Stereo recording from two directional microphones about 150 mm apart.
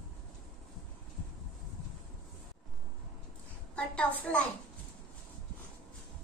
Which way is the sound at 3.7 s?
5° left (ahead or behind).